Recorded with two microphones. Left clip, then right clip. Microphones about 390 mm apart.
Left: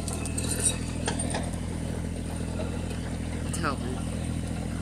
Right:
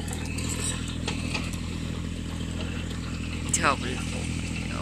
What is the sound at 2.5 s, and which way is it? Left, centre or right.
Mechanisms, left.